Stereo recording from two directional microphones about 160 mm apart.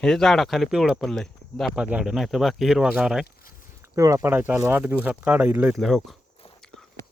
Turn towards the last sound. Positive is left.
turn(degrees=0)  # may be behind; listen again after turning